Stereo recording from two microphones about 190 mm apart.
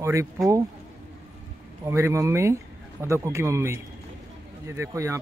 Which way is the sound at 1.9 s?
15° right (ahead or behind).